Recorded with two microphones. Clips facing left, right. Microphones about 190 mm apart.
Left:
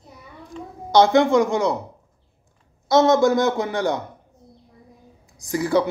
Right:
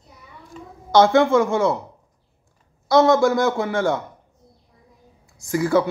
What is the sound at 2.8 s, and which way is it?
Speech, 20° left (ahead or behind).